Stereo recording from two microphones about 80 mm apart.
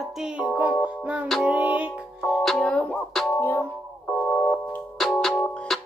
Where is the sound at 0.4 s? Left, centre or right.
Centre.